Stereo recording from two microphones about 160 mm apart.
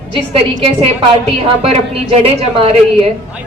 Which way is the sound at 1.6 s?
35° right (ahead or behind).